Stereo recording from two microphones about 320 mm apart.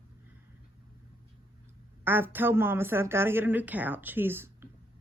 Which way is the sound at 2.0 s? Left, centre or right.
Centre.